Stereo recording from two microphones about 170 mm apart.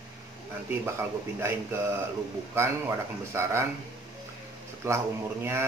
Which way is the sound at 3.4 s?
15° right (ahead or behind).